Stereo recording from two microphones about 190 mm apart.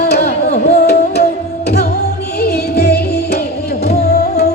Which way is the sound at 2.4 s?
55° left (ahead or behind).